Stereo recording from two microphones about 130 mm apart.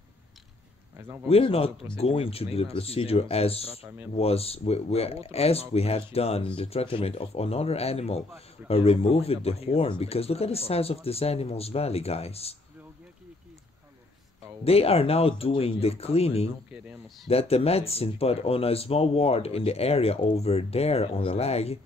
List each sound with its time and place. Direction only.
0.9 s speech: 20° right (ahead or behind)
1.3 s speech: 50° left (ahead or behind)
14.6 s speech: 50° left (ahead or behind)
16.7 s speech: 5° right (ahead or behind)
17.3 s speech: 50° left (ahead or behind)